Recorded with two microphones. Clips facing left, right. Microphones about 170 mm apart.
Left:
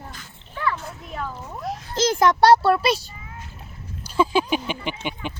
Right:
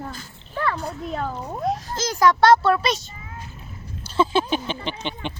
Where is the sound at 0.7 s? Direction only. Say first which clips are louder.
Right 5 dB; 40° right (ahead or behind).